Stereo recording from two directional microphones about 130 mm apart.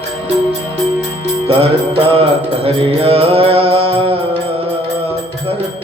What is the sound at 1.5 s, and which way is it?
Mantra, 45° right (ahead or behind).